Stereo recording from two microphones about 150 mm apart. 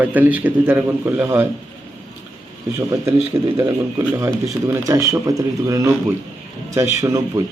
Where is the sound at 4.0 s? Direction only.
15° right (ahead or behind).